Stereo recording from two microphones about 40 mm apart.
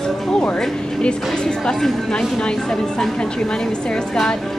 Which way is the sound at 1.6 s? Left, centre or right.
Centre.